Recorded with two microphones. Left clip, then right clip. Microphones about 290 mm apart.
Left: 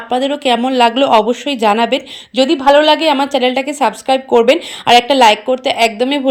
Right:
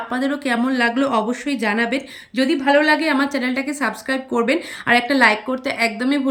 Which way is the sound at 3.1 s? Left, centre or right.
Centre.